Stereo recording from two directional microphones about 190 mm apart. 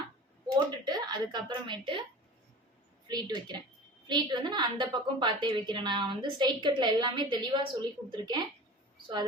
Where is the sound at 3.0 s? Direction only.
20° right (ahead or behind).